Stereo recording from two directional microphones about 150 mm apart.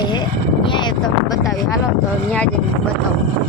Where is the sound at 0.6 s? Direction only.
35° left (ahead or behind).